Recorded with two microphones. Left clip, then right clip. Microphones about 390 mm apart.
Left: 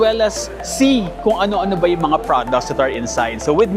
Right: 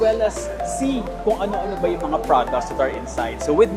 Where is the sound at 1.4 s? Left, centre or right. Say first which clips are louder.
Left 6 dB; left.